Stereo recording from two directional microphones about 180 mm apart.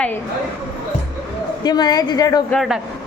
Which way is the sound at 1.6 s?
20° left (ahead or behind).